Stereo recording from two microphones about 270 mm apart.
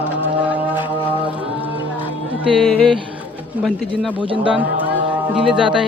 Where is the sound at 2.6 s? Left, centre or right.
Centre.